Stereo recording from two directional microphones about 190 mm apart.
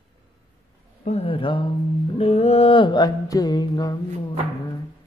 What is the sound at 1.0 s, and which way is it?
Mantra, 30° left (ahead or behind).